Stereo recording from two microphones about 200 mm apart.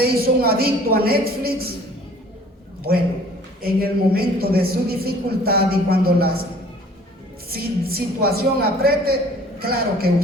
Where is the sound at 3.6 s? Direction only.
50° right (ahead or behind).